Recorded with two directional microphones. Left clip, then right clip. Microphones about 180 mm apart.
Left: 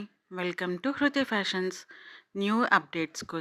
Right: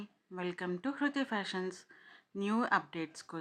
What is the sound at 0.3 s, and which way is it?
Speech, 25° left (ahead or behind).